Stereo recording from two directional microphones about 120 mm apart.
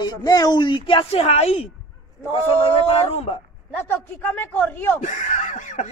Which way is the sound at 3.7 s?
20° left (ahead or behind).